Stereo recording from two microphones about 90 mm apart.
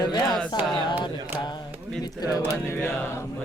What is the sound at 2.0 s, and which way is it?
Mantra, 45° left (ahead or behind).